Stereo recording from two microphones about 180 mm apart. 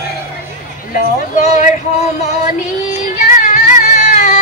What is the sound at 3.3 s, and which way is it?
Music, 45° left (ahead or behind).